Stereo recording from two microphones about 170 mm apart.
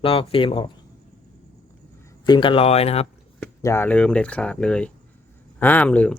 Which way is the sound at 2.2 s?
30° left (ahead or behind).